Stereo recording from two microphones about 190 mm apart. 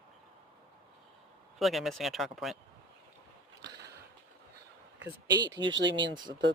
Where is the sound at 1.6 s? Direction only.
Centre (ahead or behind).